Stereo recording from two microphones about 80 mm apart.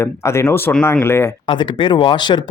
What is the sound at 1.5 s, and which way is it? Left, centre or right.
Speech, left.